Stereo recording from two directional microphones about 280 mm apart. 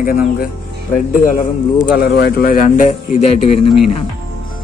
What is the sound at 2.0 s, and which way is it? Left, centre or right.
A man's voice, left.